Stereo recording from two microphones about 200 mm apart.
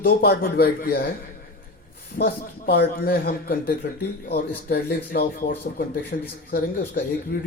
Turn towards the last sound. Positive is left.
turn(degrees=45)  # may be behind; listen again after turning